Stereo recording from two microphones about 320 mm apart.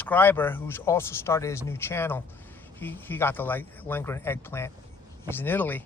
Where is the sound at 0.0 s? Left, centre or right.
Centre.